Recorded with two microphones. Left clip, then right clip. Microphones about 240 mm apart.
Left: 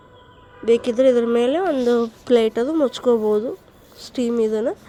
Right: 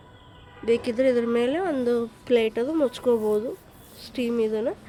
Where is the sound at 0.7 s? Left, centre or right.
Centre.